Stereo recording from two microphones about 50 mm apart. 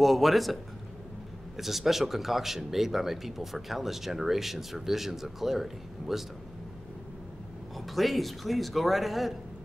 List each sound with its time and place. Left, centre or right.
0.0 s speech: centre
1.6 s speech: centre
7.7 s speech: centre